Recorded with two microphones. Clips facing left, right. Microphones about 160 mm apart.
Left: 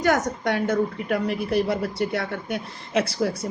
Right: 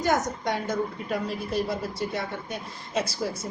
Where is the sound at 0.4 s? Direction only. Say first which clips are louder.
Left 5 dB; 65° left (ahead or behind).